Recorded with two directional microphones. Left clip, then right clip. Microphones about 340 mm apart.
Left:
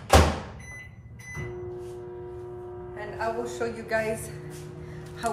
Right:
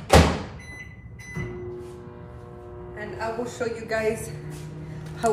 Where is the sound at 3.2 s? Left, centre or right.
Centre.